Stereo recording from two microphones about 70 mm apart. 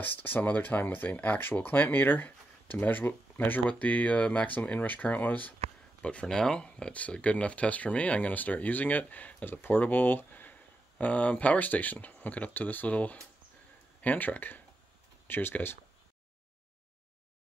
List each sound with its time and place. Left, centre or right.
0.0 s speech: left
6.0 s speech: centre; by 15.8 s left